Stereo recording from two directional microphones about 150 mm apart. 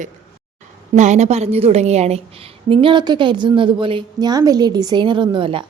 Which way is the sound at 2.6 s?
35° right (ahead or behind).